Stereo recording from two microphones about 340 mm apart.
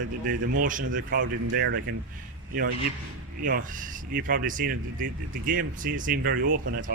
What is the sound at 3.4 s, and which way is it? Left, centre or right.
Speech, right.